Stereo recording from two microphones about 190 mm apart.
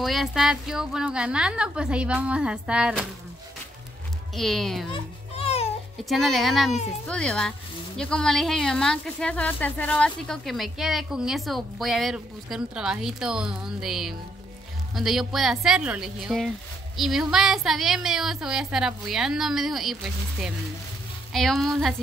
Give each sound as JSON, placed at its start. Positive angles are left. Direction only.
{"t": 0.0, "sound": "a woman's voice", "side_deg": 0}
{"t": 4.4, "sound": "a woman's voice", "side_deg": 0}
{"t": 4.9, "sound": "children playing", "side_deg": 30}
{"t": 6.0, "sound": "a woman's voice", "side_deg": 0}